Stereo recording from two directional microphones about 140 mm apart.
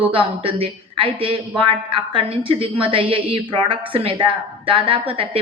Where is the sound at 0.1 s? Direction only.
40° right (ahead or behind).